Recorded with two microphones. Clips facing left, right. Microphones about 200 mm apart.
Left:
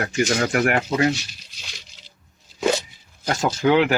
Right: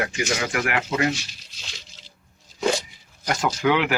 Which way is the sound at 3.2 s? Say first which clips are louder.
Left 2 dB; 30° left (ahead or behind).